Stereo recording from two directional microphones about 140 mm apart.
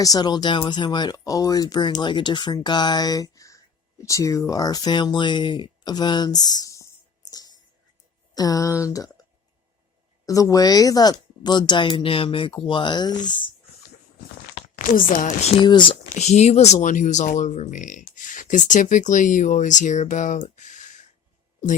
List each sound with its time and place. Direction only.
0.0 s speech: 30° left (ahead or behind)
10.2 s a woman's voice: 25° left (ahead or behind)
14.8 s speech: 75° left (ahead or behind); by 15.5 s 60° left (ahead or behind)
15.6 s a woman's voice: 35° left (ahead or behind)
16.1 s speech: 55° left (ahead or behind)